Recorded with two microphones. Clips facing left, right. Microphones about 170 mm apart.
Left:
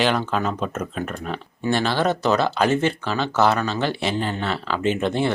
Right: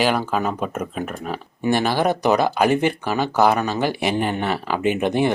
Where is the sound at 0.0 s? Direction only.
10° right (ahead or behind).